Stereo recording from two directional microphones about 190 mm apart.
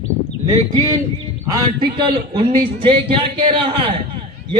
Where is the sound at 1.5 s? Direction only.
20° right (ahead or behind).